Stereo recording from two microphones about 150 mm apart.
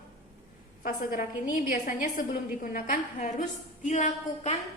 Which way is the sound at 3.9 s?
50° left (ahead or behind).